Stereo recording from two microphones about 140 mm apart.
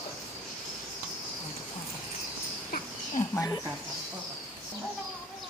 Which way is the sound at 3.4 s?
25° left (ahead or behind).